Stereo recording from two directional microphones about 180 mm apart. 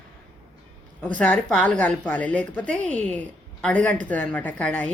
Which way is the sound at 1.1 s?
5° left (ahead or behind).